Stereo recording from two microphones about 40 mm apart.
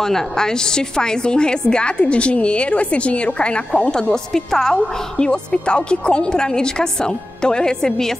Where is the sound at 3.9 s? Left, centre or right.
Centre.